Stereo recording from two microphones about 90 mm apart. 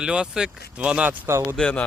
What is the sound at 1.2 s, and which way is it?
Speech, 30° right (ahead or behind).